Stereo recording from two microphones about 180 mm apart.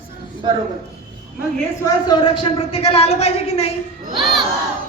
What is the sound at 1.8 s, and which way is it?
A woman's voice, 25° left (ahead or behind).